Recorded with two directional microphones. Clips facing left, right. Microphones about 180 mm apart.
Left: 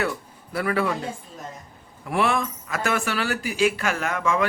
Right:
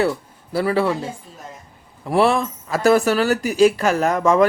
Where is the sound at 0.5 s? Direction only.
30° right (ahead or behind).